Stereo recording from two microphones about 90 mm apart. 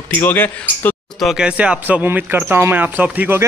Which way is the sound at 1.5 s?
15° right (ahead or behind).